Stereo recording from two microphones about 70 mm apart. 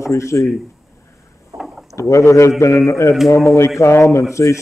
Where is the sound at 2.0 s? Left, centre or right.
Left.